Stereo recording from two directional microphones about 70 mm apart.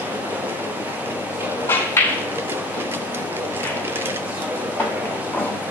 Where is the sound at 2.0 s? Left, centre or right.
Left.